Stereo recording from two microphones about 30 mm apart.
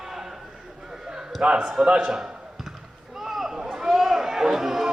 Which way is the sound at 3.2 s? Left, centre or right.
Centre.